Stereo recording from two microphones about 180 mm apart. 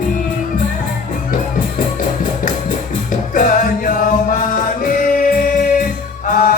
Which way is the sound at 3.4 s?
50° left (ahead or behind).